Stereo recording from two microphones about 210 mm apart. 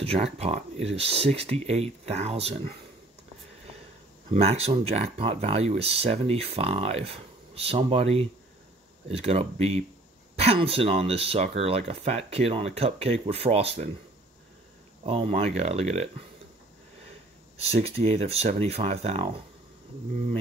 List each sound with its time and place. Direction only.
0.0 s speech: 30° right (ahead or behind)
4.3 s speech: 30° right (ahead or behind)
15.0 s speech: 25° right (ahead or behind)
17.7 s speech: 30° right (ahead or behind)